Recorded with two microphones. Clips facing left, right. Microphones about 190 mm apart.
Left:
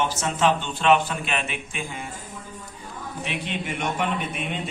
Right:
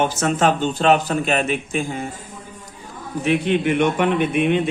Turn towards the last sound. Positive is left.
turn(degrees=-65)  # may be behind; listen again after turning